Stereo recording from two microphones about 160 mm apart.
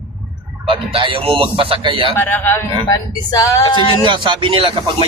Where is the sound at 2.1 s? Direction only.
10° left (ahead or behind); by 3.9 s 30° left (ahead or behind).